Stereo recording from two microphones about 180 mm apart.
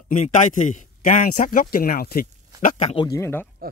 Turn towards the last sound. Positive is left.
turn(degrees=15)  # may be behind; listen again after turning